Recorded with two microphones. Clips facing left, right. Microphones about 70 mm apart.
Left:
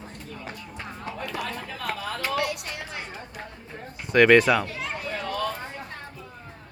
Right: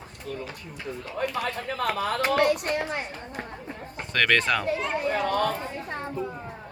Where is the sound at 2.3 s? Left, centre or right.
Right.